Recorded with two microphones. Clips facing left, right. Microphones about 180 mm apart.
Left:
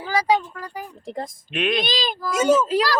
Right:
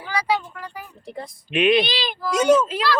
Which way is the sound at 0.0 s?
40° left (ahead or behind).